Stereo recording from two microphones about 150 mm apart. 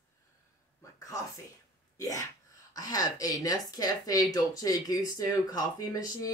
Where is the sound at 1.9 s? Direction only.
20° left (ahead or behind).